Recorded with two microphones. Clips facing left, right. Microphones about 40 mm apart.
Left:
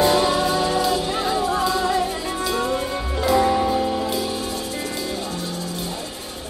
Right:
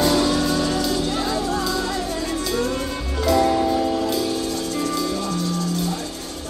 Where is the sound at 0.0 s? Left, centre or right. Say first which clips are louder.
Left 1 dB; left.